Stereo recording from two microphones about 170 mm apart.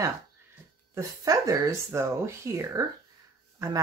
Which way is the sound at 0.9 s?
20° right (ahead or behind).